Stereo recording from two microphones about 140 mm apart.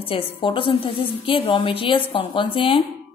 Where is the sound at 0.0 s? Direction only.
40° left (ahead or behind).